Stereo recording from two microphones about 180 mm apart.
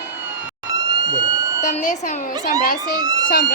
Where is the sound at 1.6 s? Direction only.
40° left (ahead or behind).